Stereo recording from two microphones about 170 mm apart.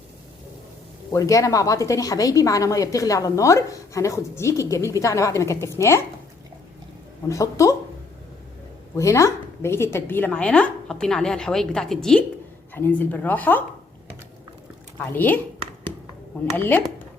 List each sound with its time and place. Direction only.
1.1 s a woman's voice: 20° left (ahead or behind)
7.3 s a woman's voice: 20° left (ahead or behind)
9.0 s a woman's voice: 20° left (ahead or behind)
15.1 s speech: 10° left (ahead or behind)
16.6 s speech: 10° left (ahead or behind)